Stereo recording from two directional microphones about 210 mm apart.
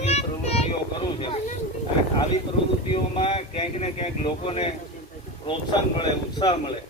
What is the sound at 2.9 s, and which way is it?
Speech, 25° left (ahead or behind).